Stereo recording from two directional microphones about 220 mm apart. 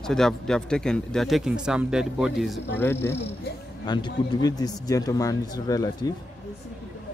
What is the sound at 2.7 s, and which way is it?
A man's voice, 10° left (ahead or behind).